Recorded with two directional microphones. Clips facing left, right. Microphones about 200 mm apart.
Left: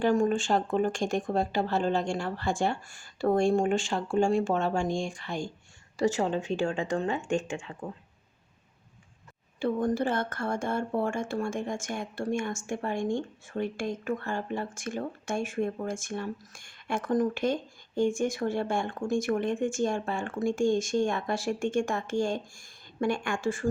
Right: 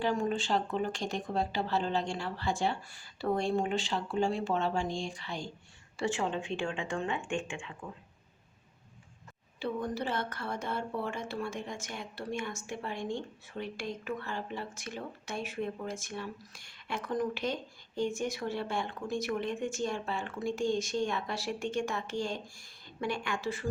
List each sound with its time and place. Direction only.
0.0 s speech: 50° left (ahead or behind)
9.6 s speech: 50° left (ahead or behind)